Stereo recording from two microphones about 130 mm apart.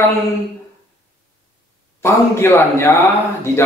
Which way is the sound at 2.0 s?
20° left (ahead or behind).